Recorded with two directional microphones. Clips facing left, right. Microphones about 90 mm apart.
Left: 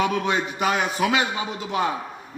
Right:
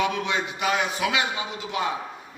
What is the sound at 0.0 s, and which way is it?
A man's voice, 40° left (ahead or behind).